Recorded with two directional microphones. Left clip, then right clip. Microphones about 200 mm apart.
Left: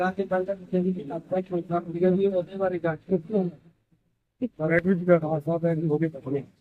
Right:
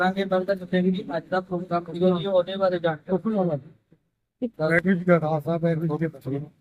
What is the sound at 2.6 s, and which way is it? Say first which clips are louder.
Speech: right 4 dB; 10° left (ahead or behind).